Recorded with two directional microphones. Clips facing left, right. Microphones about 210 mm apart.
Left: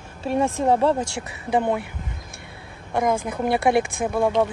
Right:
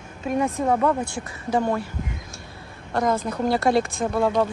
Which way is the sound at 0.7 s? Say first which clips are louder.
Left 2 dB; 30° left (ahead or behind).